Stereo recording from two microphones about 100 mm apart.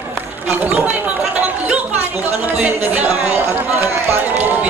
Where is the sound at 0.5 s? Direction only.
15° right (ahead or behind).